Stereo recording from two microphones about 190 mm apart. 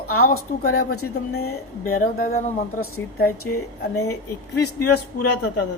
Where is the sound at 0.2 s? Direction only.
50° left (ahead or behind).